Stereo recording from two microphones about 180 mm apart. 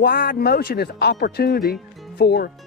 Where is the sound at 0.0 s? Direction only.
55° left (ahead or behind).